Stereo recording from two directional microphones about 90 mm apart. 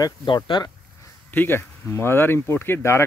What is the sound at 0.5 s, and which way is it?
Speech, 70° left (ahead or behind).